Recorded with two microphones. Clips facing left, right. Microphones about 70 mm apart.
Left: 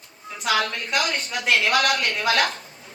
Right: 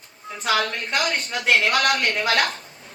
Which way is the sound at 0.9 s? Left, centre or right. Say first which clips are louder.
Even; right.